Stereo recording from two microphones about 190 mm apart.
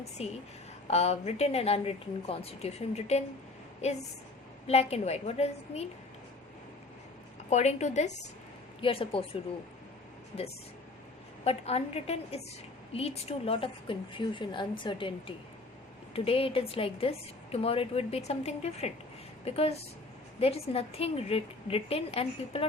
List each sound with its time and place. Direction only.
0.2 s a woman's voice: 35° left (ahead or behind)
4.6 s a woman's voice: 35° left (ahead or behind)
7.5 s a woman's voice: 35° left (ahead or behind)
11.4 s a woman's voice: 30° left (ahead or behind)
16.1 s a woman's voice: 30° left (ahead or behind)